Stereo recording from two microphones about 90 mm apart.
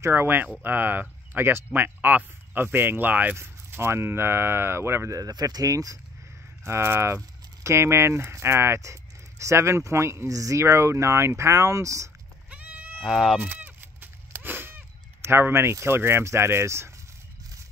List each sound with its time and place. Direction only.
0.0 s speech: 25° right (ahead or behind)
6.6 s speech: 30° right (ahead or behind)
12.4 s goat: 15° right (ahead or behind)
13.0 s speech: centre (ahead or behind)
13.4 s sheep: 20° right (ahead or behind)